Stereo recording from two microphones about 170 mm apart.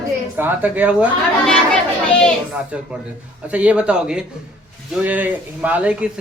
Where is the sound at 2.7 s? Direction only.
5° right (ahead or behind).